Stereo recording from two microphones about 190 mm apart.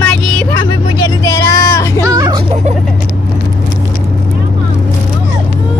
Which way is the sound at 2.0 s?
20° right (ahead or behind).